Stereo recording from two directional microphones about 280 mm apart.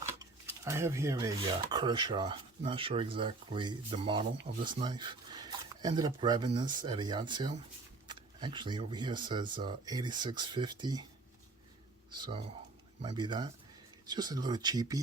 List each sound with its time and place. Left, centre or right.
0.1 s speech: centre
12.1 s speech: centre